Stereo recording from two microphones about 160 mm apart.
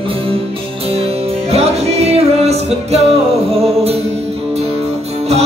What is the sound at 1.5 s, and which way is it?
Music, 40° right (ahead or behind).